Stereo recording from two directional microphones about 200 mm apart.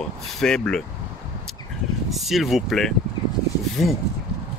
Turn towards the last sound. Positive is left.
turn(degrees=0)  # may be behind; listen again after turning